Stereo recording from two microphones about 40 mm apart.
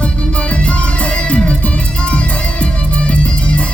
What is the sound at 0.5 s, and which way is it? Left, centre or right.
Music, left.